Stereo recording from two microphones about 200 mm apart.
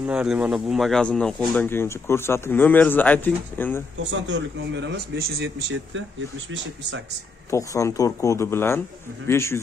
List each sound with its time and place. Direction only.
0.0 s speech: 5° right (ahead or behind)
4.3 s a man's voice: 60° right (ahead or behind)
7.5 s speech: 15° left (ahead or behind)